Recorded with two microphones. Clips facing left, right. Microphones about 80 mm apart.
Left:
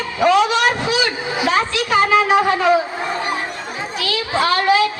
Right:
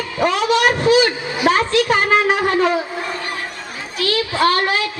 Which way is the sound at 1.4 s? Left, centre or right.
Right.